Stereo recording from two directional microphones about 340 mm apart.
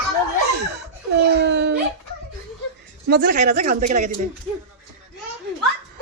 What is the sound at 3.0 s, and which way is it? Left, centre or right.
Speech, right.